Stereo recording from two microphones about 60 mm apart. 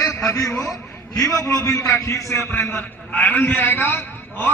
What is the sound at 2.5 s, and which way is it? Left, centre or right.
A man's voice, left.